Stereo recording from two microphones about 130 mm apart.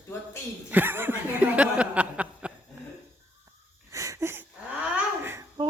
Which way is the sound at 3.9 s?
25° right (ahead or behind).